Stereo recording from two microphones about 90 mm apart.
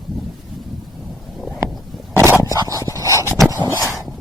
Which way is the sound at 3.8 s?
35° left (ahead or behind).